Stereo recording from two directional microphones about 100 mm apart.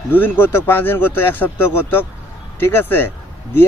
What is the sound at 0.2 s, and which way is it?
Speech, 20° left (ahead or behind).